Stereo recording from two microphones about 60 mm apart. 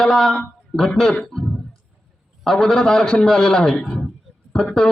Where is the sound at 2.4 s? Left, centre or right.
Centre.